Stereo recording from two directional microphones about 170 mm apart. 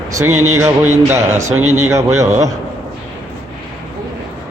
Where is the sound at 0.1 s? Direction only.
15° right (ahead or behind).